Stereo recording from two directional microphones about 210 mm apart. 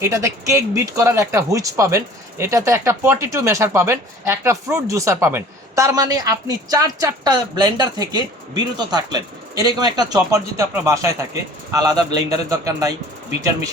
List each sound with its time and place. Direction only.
0.0 s speech: 15° right (ahead or behind)